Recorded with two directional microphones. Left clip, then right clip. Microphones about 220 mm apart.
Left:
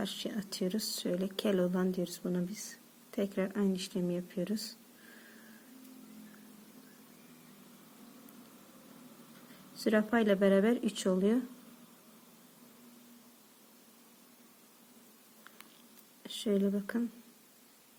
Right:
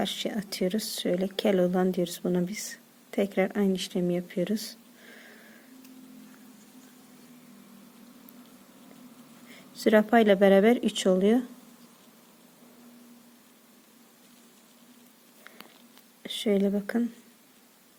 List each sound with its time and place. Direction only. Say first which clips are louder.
0.0 s speech: right 8 dB; 25° right (ahead or behind)
9.7 s speech: right 9 dB; 30° right (ahead or behind)
16.2 s speech: right 6 dB; 25° right (ahead or behind)